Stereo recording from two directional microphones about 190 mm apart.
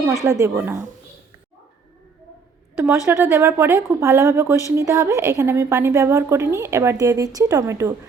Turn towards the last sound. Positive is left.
turn(degrees=-15)  # may be behind; listen again after turning